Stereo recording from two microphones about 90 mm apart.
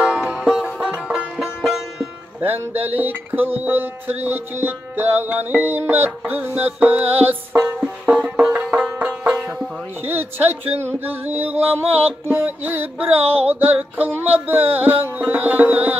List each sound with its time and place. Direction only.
0.0 s music: 15° right (ahead or behind)
2.4 s music: 20° right (ahead or behind)
10.0 s music: 20° right (ahead or behind)
13.2 s music: 90° right
13.5 s music: 20° right (ahead or behind)